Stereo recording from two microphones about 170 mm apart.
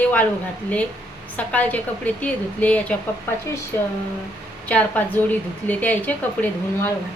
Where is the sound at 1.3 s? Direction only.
10° left (ahead or behind).